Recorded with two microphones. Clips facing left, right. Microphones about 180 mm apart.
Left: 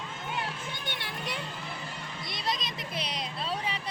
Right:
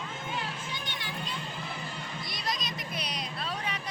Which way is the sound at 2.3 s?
25° left (ahead or behind).